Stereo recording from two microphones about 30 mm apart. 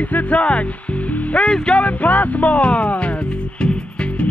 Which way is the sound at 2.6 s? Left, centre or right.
Left.